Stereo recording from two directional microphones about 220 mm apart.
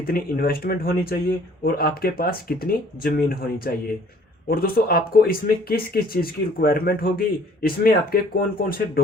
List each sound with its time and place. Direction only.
0.0 s speech: 45° left (ahead or behind)